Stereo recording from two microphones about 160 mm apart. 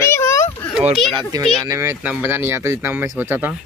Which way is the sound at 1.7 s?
15° right (ahead or behind).